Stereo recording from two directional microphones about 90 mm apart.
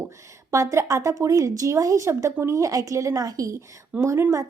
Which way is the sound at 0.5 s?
35° right (ahead or behind).